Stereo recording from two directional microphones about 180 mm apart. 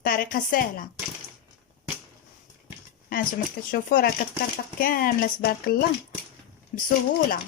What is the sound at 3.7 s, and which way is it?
A woman's voice, 55° left (ahead or behind).